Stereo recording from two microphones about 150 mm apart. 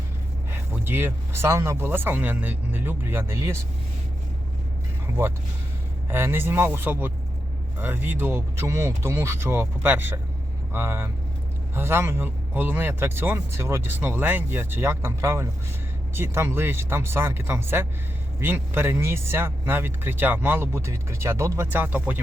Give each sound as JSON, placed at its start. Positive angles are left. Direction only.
{"t": 0.5, "sound": "speech", "side_deg": -15}
{"t": 6.1, "sound": "speech", "side_deg": -15}